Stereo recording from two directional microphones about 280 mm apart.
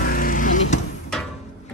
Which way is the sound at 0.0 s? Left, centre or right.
Left.